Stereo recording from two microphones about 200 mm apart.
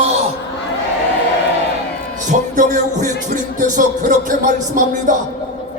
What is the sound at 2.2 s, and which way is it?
Music, 40° right (ahead or behind).